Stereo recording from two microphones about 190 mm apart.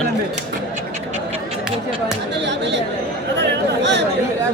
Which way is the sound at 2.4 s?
65° right (ahead or behind).